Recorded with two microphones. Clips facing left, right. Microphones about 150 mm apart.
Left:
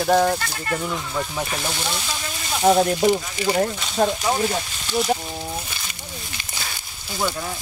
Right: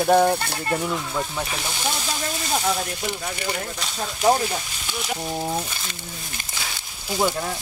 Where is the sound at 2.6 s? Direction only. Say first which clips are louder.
Left 9 dB; 40° left (ahead or behind).